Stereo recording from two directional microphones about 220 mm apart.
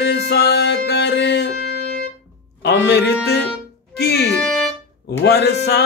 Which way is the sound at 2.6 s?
50° left (ahead or behind).